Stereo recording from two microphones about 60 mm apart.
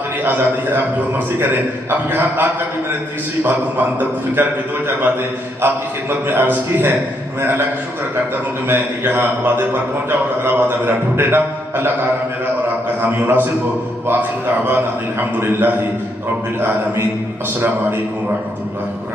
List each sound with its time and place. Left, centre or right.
0.2 s a man's voice: right
8.6 s a man's voice: right
13.0 s a man's voice: right
14.7 s a man's voice: right
16.6 s a man's voice: right